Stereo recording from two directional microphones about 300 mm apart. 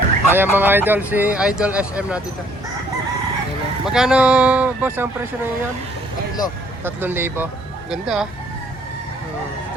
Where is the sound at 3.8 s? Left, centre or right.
Centre.